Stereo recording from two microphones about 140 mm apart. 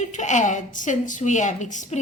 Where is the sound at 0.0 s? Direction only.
60° left (ahead or behind).